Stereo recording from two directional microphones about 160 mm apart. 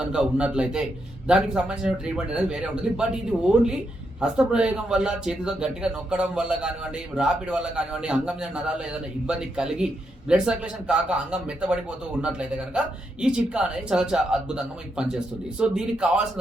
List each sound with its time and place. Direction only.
0.0 s a man's voice: 5° right (ahead or behind)
4.2 s a man's voice: 5° right (ahead or behind)